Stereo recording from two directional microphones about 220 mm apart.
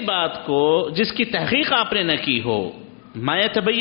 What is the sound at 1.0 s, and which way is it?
A man's voice, 10° left (ahead or behind).